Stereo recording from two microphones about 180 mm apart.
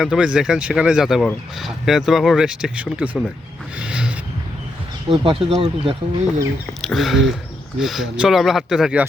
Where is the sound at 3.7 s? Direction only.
5° right (ahead or behind).